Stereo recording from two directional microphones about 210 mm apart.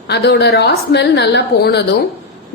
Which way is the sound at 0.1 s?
50° left (ahead or behind).